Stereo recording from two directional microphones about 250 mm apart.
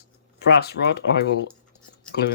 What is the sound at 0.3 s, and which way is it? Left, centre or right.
Speech, left.